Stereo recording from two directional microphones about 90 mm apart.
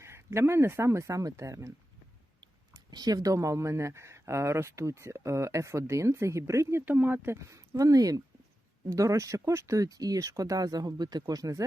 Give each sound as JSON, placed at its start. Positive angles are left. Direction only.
{"t": 0.0, "sound": "speech", "side_deg": -30}
{"t": 2.4, "sound": "speech", "side_deg": -50}
{"t": 6.8, "sound": "speech", "side_deg": -20}